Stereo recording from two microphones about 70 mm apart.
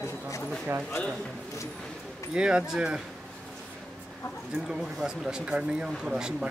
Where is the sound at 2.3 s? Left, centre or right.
Centre.